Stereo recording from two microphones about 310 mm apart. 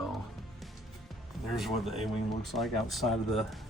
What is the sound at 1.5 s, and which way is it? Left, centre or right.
Speech, centre.